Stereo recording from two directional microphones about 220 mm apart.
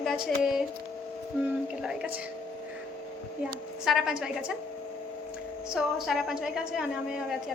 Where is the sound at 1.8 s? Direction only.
5° right (ahead or behind).